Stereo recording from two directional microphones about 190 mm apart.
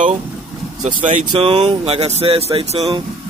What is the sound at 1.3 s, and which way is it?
Speech, 30° right (ahead or behind).